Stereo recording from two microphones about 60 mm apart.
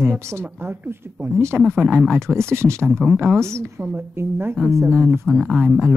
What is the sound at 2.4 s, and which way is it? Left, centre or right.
Speech, right.